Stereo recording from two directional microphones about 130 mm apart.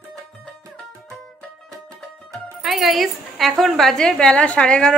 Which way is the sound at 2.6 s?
Centre (ahead or behind).